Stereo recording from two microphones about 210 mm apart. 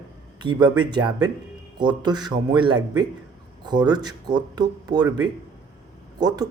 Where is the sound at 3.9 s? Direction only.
20° right (ahead or behind).